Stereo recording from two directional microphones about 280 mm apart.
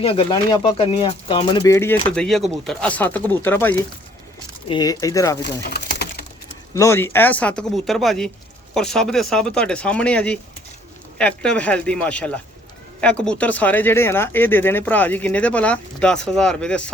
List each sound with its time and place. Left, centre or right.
0.0 s speech: centre
5.6 s pigeon: left
6.7 s speech: centre